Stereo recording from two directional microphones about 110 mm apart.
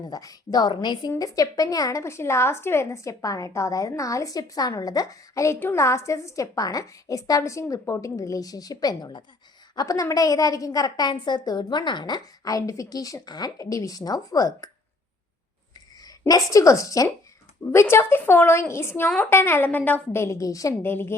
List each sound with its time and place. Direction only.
0.0 s a woman's voice: 35° left (ahead or behind)
16.0 s a woman's voice: 35° left (ahead or behind)
20.9 s a woman's voice: 20° left (ahead or behind)